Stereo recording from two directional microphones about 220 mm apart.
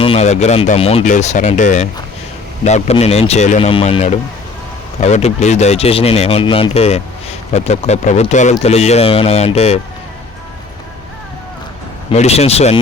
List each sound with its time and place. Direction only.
0.0 s speech: 30° left (ahead or behind)
12.1 s speech: 30° left (ahead or behind)